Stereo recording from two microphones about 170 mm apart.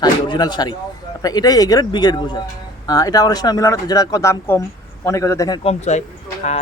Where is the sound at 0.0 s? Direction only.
25° left (ahead or behind).